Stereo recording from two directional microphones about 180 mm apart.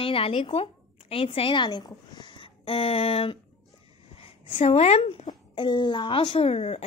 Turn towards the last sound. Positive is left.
turn(degrees=35)  # may be behind; listen again after turning